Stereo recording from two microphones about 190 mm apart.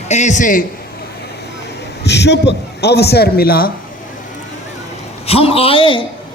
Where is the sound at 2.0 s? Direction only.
65° left (ahead or behind).